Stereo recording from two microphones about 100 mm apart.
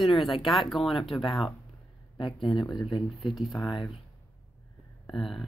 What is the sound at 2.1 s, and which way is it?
Speech, 55° left (ahead or behind).